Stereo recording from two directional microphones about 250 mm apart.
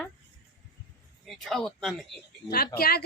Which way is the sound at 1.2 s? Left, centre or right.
Centre.